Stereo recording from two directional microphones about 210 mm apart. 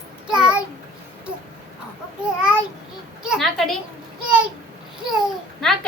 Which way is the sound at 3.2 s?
Centre (ahead or behind).